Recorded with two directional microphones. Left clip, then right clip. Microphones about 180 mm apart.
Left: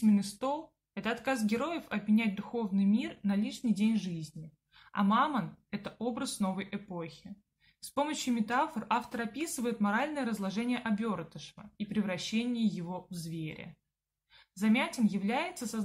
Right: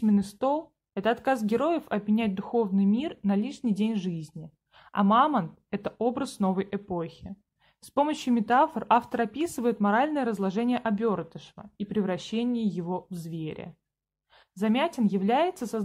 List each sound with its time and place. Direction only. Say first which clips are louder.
0.0 s speech: right 5 dB; 50° right (ahead or behind)